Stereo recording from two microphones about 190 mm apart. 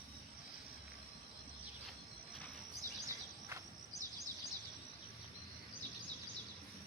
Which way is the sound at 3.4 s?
15° right (ahead or behind).